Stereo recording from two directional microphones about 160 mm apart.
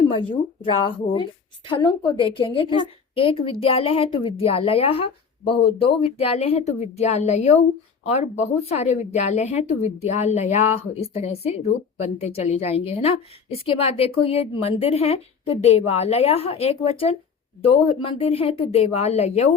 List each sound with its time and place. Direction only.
0.2 s speech: 30° left (ahead or behind)